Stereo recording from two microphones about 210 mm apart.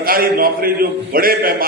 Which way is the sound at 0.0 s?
45° right (ahead or behind).